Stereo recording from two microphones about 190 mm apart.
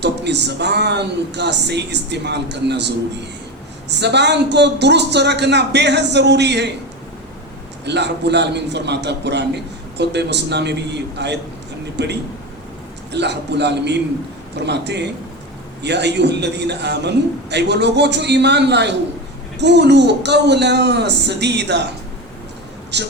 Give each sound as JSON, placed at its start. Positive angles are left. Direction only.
{"t": 0.0, "sound": "a man's voice", "side_deg": -65}
{"t": 7.9, "sound": "a man's voice", "side_deg": -65}
{"t": 22.9, "sound": "a man's voice", "side_deg": -65}